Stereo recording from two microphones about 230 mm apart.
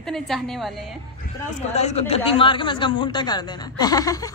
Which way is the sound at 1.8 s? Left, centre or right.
Left.